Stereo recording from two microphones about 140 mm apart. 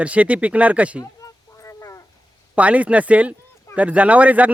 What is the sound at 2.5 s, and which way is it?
A man's voice, 10° right (ahead or behind).